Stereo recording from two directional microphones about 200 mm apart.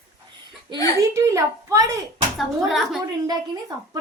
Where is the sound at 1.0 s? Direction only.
15° right (ahead or behind).